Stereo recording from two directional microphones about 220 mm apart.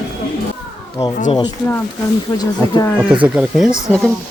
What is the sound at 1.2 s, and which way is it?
Speech, 25° left (ahead or behind).